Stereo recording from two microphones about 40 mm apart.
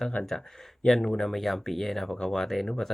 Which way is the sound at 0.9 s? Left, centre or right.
Centre.